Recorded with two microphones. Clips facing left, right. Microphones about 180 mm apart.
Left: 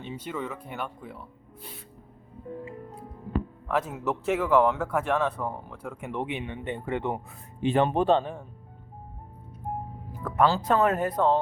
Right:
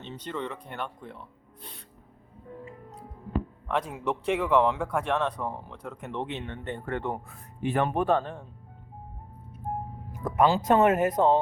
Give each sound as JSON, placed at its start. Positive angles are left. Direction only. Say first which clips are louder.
{"t": 0.0, "sound": "speech", "louder": "left 1 dB", "side_deg": 10}
{"t": 3.7, "sound": "speech", "louder": "left 1 dB", "side_deg": 5}
{"t": 8.2, "sound": "speech", "louder": "left 2 dB", "side_deg": 10}
{"t": 10.2, "sound": "speech", "louder": "right 1 dB", "side_deg": -15}